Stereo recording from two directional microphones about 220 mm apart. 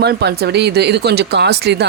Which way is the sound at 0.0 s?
50° right (ahead or behind).